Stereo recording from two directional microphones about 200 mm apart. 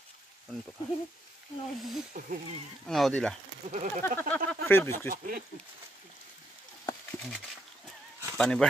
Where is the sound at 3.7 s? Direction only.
35° right (ahead or behind).